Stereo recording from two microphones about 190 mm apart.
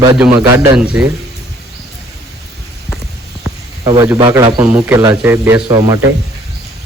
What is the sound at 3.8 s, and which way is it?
Speech, 25° right (ahead or behind).